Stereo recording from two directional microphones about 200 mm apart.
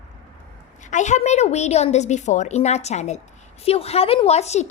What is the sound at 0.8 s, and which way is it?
A woman's voice, 35° left (ahead or behind).